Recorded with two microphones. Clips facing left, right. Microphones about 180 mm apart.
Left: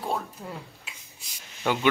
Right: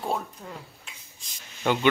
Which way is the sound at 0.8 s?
5° left (ahead or behind).